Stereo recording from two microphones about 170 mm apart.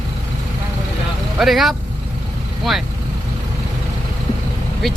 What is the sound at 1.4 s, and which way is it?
Speech, centre (ahead or behind).